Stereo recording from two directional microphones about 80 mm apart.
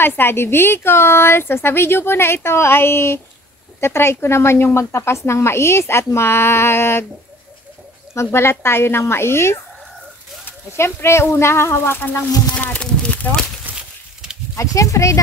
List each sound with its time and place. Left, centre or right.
0.0 s a woman's voice: left
8.1 s speech: left
12.0 s a woman's voice: left
13.1 s a sound: left
13.7 s a sound: centre
14.5 s speech: left